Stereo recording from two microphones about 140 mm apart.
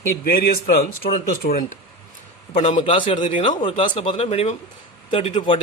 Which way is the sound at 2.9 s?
40° left (ahead or behind).